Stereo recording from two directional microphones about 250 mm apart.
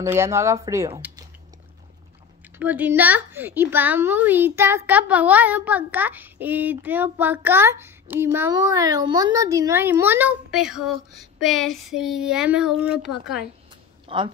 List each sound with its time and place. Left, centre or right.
0.0 s a woman's voice: centre
2.6 s a woman's voice: centre
14.0 s speech: right